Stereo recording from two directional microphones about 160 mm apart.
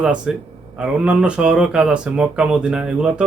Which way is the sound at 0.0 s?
5° right (ahead or behind).